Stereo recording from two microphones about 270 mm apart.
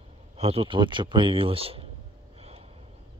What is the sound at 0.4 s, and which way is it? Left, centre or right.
Speech, right.